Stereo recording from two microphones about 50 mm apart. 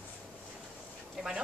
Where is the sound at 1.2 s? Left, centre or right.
Centre.